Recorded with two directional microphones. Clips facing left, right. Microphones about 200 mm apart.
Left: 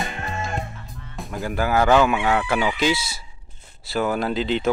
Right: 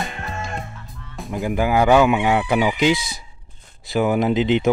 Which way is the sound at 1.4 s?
15° right (ahead or behind).